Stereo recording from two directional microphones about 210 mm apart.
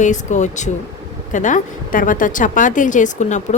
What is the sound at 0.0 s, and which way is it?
A woman's voice, 35° left (ahead or behind).